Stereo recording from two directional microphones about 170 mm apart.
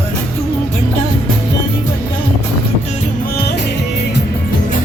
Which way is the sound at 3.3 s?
70° left (ahead or behind).